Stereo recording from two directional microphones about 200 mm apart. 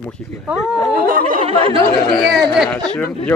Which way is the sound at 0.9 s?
45° right (ahead or behind).